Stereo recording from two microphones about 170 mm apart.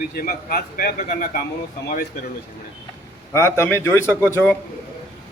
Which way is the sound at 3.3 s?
15° left (ahead or behind).